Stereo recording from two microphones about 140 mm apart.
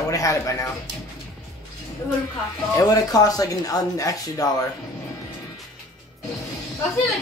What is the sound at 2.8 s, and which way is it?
Speech, 25° left (ahead or behind).